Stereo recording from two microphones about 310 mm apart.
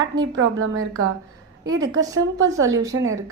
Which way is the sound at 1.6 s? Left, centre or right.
Centre.